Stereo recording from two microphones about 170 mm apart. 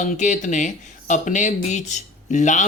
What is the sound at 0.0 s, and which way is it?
Speech, 45° left (ahead or behind).